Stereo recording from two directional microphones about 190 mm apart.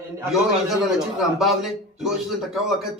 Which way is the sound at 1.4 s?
Centre (ahead or behind).